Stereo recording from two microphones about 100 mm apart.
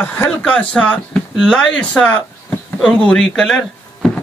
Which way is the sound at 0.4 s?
10° left (ahead or behind).